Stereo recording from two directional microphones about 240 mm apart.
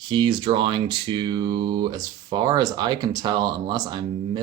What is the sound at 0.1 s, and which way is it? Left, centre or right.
Speech, centre.